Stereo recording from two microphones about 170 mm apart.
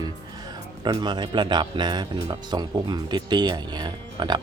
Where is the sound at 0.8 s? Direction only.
25° right (ahead or behind).